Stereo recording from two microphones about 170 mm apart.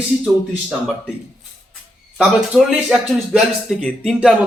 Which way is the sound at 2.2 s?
5° right (ahead or behind).